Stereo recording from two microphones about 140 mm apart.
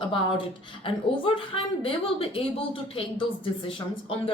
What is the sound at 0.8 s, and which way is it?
Speech, 40° left (ahead or behind).